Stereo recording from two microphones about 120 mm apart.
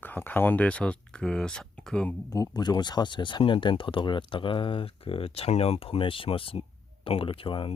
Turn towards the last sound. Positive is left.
turn(degrees=45)  # may be behind; listen again after turning